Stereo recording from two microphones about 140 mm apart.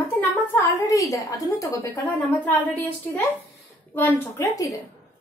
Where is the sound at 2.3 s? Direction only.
10° left (ahead or behind).